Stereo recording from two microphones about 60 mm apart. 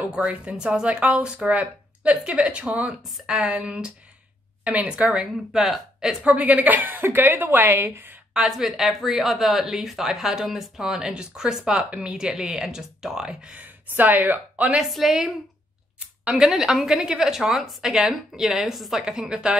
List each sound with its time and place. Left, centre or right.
0.1 s a woman's voice: right
5.0 s speech: centre
6.2 s a woman's voice: right
8.3 s speech: centre; by 14.7 s right
14.9 s a woman's voice: centre